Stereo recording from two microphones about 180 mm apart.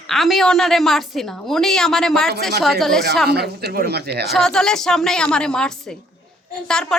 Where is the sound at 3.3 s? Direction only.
60° right (ahead or behind).